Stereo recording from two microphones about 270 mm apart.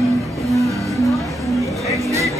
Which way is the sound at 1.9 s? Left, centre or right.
Centre.